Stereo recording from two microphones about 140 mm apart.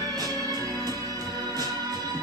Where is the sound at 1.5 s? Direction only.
25° right (ahead or behind).